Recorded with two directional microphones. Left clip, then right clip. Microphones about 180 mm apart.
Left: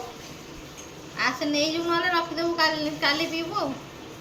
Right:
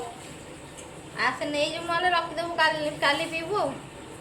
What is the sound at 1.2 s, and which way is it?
A woman's voice, 35° right (ahead or behind).